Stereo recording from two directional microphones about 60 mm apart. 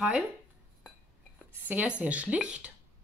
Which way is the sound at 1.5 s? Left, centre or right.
Right.